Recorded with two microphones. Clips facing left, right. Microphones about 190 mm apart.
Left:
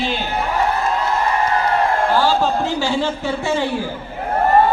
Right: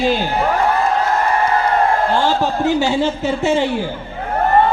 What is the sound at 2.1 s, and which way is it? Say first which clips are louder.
A woman's voice: even; 20° right (ahead or behind).